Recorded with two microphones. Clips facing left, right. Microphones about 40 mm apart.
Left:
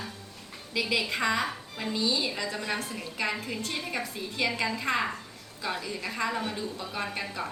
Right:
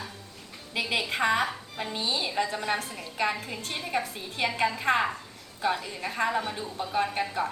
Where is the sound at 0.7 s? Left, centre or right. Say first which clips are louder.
Even; right.